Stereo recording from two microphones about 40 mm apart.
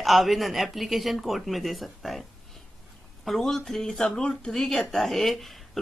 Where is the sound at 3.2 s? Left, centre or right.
Centre.